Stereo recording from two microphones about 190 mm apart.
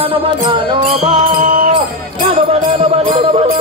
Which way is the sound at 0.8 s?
45° right (ahead or behind).